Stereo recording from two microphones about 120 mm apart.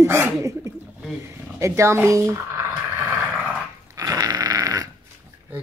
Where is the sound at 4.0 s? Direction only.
30° right (ahead or behind).